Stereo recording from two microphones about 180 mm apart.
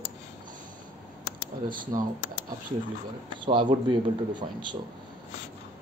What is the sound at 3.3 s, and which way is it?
Speech, 25° right (ahead or behind).